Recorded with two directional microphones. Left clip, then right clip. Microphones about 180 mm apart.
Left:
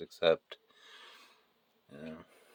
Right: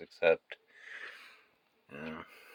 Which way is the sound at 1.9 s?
Centre (ahead or behind).